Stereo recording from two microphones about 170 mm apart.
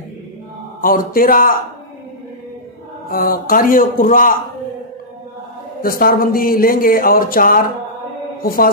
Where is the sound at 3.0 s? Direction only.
55° left (ahead or behind).